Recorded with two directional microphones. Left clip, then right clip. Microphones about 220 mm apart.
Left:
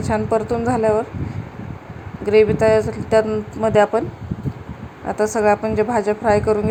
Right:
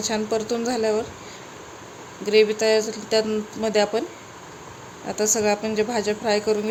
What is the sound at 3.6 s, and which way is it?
Speech, 5° right (ahead or behind).